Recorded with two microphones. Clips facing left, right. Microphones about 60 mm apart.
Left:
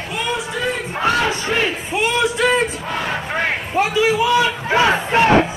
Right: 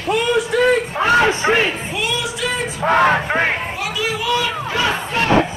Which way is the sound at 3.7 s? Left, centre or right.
Left.